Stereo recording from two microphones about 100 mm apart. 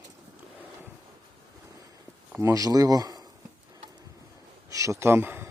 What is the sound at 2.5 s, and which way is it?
Speech, 35° right (ahead or behind).